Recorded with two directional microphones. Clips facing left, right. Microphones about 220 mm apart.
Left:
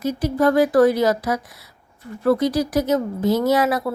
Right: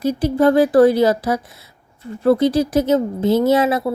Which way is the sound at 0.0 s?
30° right (ahead or behind).